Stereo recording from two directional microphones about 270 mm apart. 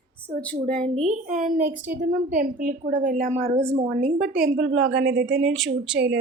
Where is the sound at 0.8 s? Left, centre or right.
Right.